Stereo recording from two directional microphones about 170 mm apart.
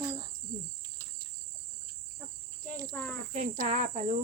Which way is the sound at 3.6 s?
50° right (ahead or behind).